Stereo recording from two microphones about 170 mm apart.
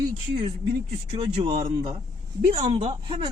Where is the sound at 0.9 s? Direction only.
35° right (ahead or behind).